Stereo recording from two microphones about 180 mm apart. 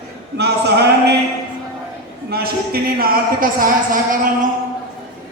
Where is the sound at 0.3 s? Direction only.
65° right (ahead or behind).